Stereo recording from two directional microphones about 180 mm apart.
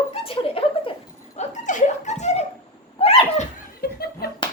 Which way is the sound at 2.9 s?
35° left (ahead or behind).